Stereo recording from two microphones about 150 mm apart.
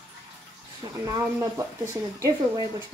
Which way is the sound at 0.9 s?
20° right (ahead or behind).